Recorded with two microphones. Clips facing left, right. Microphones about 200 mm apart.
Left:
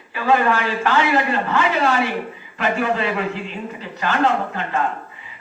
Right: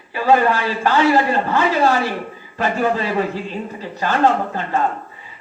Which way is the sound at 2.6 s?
35° right (ahead or behind).